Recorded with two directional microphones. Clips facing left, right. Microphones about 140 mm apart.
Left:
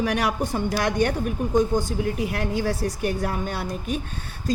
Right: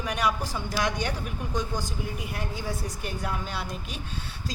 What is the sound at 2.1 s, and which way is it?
A woman's voice, 75° left (ahead or behind).